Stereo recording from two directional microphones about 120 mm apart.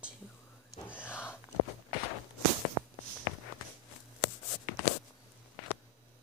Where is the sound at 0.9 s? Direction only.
15° left (ahead or behind).